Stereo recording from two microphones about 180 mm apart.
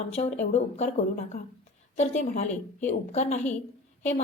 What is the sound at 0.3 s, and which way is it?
A woman's voice, 40° left (ahead or behind).